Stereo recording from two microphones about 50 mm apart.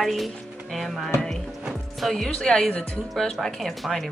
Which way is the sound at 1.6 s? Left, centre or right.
Centre.